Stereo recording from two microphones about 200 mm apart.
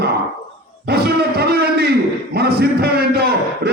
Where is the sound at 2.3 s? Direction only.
55° right (ahead or behind).